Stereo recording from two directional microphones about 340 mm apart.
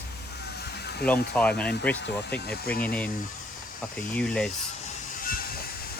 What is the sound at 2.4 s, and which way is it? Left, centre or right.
Speech, left.